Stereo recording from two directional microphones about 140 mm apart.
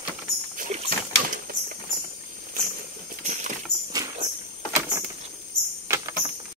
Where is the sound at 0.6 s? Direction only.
55° right (ahead or behind).